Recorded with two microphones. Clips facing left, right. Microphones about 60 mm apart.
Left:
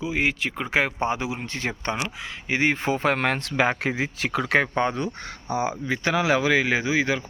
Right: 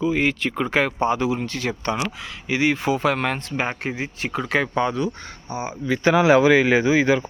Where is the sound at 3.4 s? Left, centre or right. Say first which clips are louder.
Left 3 dB; left.